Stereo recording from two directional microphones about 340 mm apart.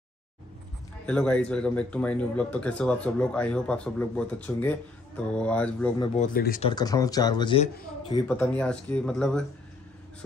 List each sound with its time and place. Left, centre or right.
1.0 s speech: centre
6.1 s speech: left
6.7 s speech: centre
8.3 s speech: centre